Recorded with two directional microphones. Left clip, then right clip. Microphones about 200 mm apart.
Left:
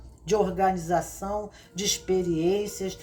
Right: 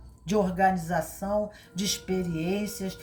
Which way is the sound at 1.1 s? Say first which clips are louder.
Right 2 dB; 25° left (ahead or behind).